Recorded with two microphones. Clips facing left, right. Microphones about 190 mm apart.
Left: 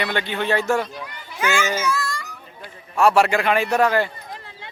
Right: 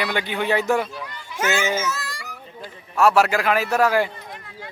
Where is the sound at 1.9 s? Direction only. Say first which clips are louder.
Left 7 dB; 35° right (ahead or behind).